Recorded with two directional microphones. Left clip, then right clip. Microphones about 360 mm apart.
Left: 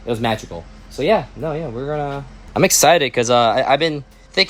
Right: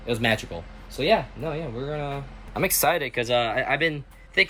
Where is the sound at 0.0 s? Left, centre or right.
Centre.